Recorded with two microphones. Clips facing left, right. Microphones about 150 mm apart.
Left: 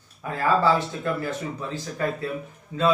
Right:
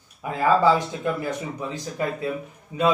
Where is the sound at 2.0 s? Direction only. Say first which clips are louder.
Right 1 dB; 15° right (ahead or behind).